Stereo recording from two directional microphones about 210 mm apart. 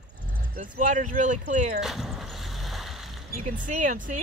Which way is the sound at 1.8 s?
Centre (ahead or behind).